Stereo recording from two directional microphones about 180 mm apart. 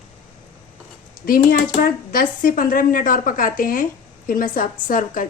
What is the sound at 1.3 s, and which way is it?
Speech, 55° left (ahead or behind).